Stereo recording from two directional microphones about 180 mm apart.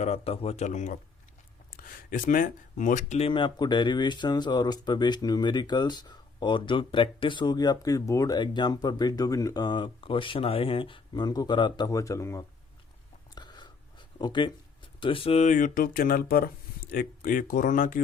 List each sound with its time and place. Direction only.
0.0 s speech: 35° left (ahead or behind); by 12.5 s 15° left (ahead or behind)
13.3 s a sound: 25° left (ahead or behind)
14.2 s speech: 25° left (ahead or behind); by 18.0 s 45° left (ahead or behind)